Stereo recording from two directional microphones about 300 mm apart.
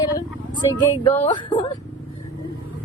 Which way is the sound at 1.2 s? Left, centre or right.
Centre.